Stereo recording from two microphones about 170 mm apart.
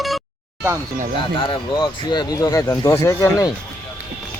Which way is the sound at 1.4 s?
30° left (ahead or behind).